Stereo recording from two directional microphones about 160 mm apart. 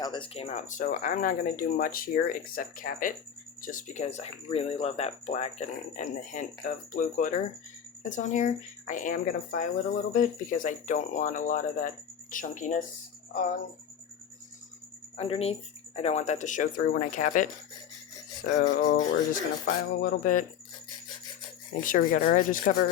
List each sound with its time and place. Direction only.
0.0 s speech: 30° left (ahead or behind); by 12.8 s 50° left (ahead or behind)
15.1 s speech: 40° left (ahead or behind)
18.5 s music: 90° left
19.1 s speech: 65° left (ahead or behind)
21.8 s speech: 60° left (ahead or behind)